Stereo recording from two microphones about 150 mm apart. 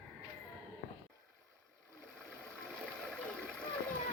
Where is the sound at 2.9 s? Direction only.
5° left (ahead or behind).